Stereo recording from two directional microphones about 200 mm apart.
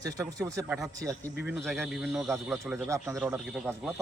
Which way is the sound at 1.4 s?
Centre (ahead or behind).